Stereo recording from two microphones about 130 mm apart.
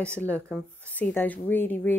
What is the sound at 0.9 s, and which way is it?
Speech, 10° left (ahead or behind).